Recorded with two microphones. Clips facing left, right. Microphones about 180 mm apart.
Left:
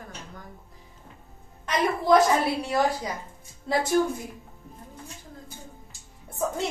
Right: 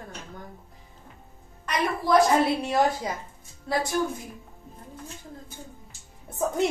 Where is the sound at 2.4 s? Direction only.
25° right (ahead or behind).